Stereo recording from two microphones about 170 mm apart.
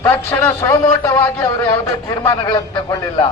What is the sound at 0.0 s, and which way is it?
Speech, 15° left (ahead or behind).